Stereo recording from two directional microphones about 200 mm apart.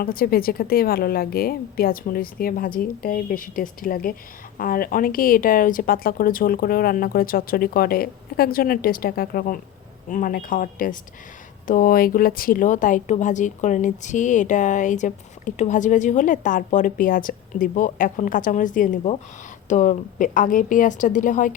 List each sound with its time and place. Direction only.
0.0 s speech: 50° left (ahead or behind)